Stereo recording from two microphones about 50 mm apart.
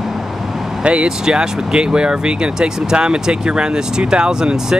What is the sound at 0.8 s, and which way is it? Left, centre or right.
Speech, centre.